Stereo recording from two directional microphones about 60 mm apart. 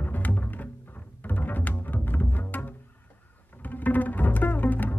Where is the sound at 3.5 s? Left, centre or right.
Left.